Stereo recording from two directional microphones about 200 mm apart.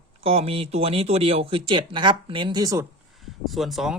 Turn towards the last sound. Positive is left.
turn(degrees=0)  # may be behind; listen again after turning